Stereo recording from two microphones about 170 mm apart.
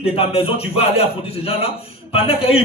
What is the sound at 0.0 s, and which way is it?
Speech, 35° left (ahead or behind).